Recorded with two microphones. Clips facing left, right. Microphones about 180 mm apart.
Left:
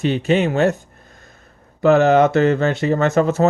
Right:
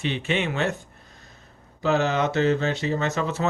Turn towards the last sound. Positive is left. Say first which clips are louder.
# left 9 dB
turn(degrees=45)  # may be behind; listen again after turning